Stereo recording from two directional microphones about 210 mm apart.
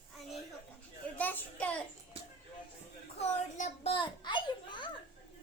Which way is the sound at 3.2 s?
30° left (ahead or behind).